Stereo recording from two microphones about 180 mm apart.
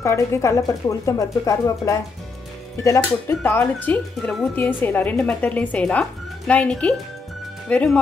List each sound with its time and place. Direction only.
0.0 s speech: 15° left (ahead or behind)